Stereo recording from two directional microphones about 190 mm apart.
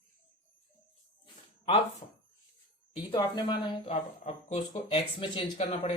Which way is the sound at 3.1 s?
20° left (ahead or behind).